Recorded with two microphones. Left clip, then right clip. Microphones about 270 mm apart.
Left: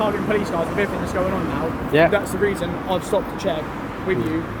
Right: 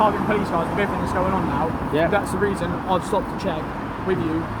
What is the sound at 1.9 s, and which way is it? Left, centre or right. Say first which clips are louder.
Speech: left 6 dB; left.